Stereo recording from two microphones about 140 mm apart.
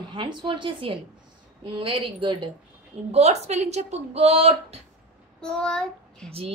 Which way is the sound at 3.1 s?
50° right (ahead or behind).